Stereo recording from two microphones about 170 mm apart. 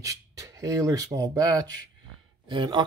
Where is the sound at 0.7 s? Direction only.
20° right (ahead or behind).